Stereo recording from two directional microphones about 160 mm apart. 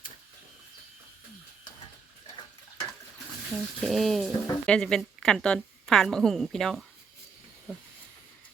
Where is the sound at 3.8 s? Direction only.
Centre (ahead or behind).